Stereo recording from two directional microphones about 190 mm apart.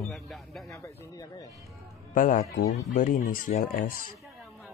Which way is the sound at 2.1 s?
45° left (ahead or behind).